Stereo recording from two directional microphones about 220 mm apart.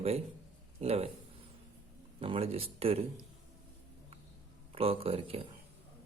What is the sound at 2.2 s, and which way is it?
Speech, 25° right (ahead or behind).